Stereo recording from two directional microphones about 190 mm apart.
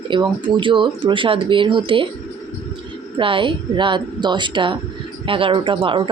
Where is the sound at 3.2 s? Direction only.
25° right (ahead or behind).